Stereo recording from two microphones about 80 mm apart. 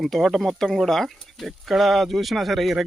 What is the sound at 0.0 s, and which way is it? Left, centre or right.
Speech, centre.